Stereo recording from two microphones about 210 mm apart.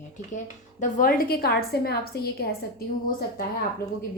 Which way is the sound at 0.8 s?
40° left (ahead or behind).